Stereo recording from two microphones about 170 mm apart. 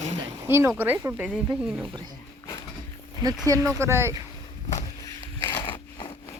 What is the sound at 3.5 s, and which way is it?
Speech, 20° right (ahead or behind).